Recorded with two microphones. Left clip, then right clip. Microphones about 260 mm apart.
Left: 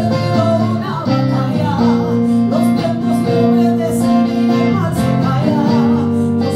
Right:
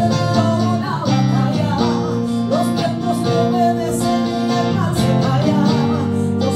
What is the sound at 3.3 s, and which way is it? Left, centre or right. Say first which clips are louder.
Music: left 4 dB; right.